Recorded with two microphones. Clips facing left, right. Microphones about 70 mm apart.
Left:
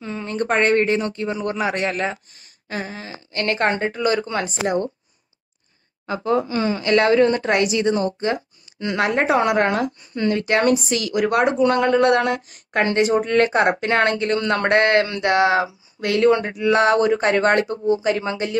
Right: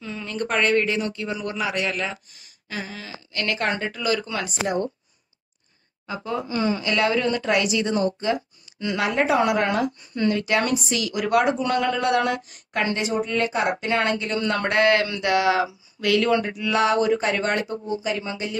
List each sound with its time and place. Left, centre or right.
0.0 s a man's voice: left
6.0 s speech: left